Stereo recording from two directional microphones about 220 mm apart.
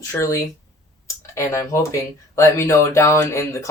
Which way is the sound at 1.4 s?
15° left (ahead or behind).